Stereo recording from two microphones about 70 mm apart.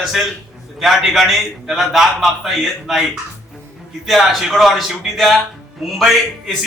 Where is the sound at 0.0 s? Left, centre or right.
Centre.